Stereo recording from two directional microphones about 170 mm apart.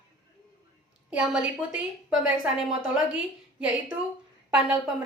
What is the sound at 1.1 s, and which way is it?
A woman's voice, 5° right (ahead or behind).